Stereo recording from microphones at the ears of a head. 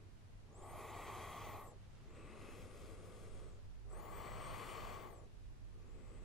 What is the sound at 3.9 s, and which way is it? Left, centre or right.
Gasp, left.